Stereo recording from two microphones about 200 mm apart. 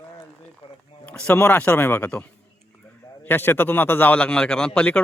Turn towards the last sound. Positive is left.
turn(degrees=5)  # may be behind; listen again after turning